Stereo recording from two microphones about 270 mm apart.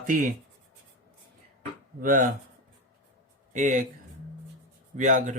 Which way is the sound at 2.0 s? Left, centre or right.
Right.